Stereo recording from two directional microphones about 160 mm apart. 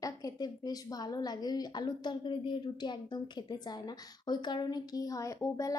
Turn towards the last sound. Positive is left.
turn(degrees=20)  # may be behind; listen again after turning